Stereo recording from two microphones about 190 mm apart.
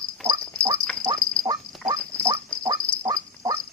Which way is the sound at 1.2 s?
5° left (ahead or behind).